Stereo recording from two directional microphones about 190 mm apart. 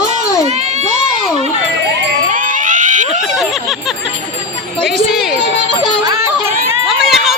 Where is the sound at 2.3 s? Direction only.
45° right (ahead or behind).